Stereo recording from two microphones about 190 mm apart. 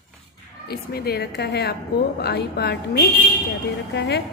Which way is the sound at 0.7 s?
55° left (ahead or behind).